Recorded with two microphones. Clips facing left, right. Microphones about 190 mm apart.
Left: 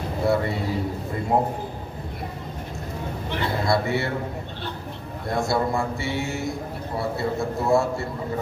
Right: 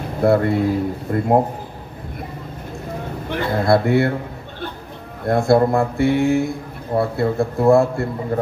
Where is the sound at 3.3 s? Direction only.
55° right (ahead or behind).